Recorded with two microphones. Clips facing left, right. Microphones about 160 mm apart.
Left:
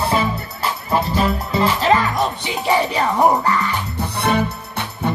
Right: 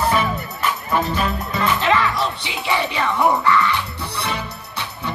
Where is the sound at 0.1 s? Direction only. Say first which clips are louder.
Left 1 dB; 30° left (ahead or behind).